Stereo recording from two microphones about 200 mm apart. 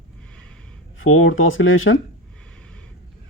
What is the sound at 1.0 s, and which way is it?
Speech, 85° left.